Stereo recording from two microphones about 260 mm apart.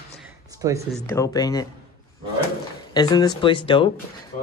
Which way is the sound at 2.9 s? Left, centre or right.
Centre.